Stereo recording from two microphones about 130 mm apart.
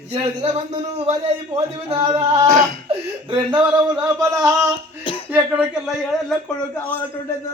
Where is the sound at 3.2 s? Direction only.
35° right (ahead or behind).